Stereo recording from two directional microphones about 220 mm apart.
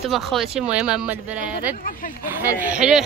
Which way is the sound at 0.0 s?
Centre (ahead or behind).